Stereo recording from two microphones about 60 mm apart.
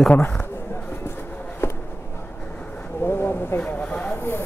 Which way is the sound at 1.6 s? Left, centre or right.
Left.